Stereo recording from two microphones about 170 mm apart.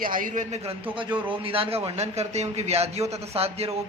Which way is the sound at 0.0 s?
55° right (ahead or behind).